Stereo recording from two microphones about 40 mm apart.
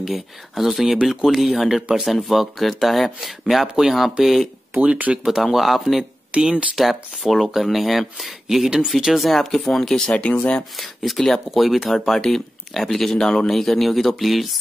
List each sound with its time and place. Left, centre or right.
0.0 s speech: centre
1.8 s speech: right
2.2 s speech: centre
3.6 s speech: centre
3.9 s speech: centre
4.7 s speech: right
5.5 s speech: centre
6.3 s speech: right
6.8 s speech: centre
10.1 s speech: left
10.8 s speech: centre